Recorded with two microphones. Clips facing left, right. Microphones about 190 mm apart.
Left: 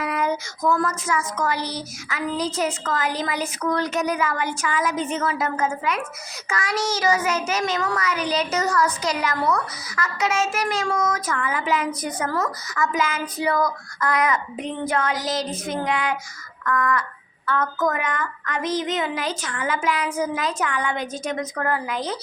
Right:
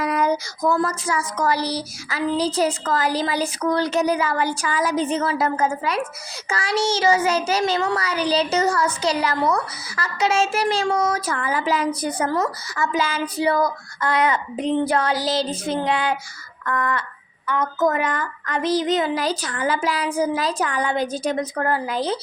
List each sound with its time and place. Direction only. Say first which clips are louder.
0.0 s a child's voice: right 3 dB; 40° right (ahead or behind)
17.4 s a child's voice: right 2 dB; 15° right (ahead or behind)